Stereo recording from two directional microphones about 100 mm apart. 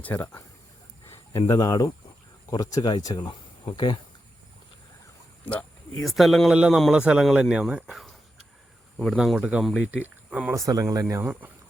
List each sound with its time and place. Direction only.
0.0 s speech: 20° left (ahead or behind)
1.5 s speech: 40° left (ahead or behind)
6.0 s speech: centre (ahead or behind)
9.1 s speech: centre (ahead or behind)
9.4 s speech: 15° right (ahead or behind)
10.5 s speech: 35° right (ahead or behind)
11.1 s speech: 20° right (ahead or behind)